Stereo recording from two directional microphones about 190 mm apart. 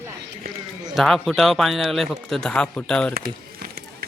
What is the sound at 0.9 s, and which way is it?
Speech, centre (ahead or behind).